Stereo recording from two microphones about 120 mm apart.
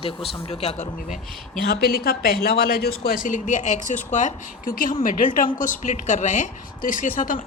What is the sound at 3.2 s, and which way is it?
Speech, 90° left.